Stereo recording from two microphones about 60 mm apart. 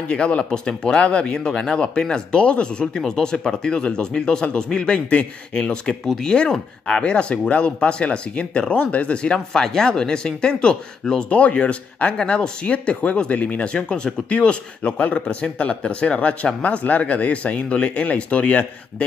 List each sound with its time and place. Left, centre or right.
0.1 s speech: centre